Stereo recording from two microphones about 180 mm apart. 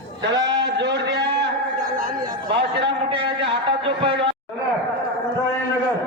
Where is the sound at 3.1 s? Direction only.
30° right (ahead or behind).